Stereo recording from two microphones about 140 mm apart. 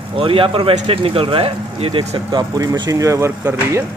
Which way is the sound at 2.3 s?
30° right (ahead or behind).